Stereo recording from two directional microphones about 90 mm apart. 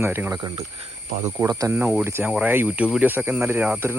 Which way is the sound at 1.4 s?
45° right (ahead or behind).